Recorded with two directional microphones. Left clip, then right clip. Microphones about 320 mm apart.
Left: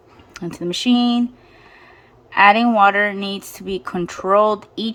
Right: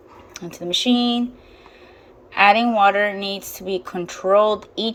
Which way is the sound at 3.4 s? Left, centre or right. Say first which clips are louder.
Right 1 dB; centre.